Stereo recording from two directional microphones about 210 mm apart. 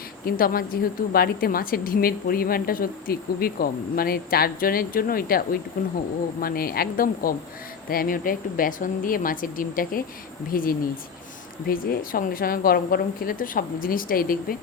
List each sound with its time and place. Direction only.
0.3 s a woman's voice: 45° left (ahead or behind)
6.4 s a woman's voice: 45° left (ahead or behind)